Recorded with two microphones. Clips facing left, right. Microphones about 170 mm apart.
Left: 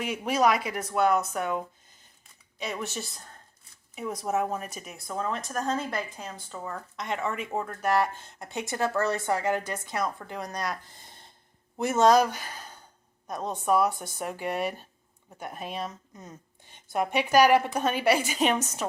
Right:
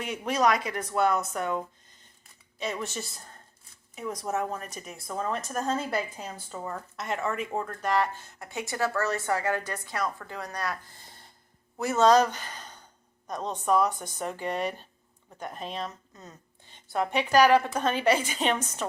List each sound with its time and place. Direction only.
0.0 s a woman's voice: 5° left (ahead or behind)
8.1 s a woman's voice: 20° left (ahead or behind)
11.8 s a woman's voice: 25° left (ahead or behind)
12.0 s a woman's voice: 10° left (ahead or behind)